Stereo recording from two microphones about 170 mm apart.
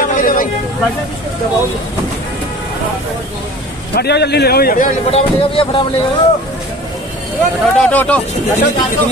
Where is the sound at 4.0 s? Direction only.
75° left (ahead or behind).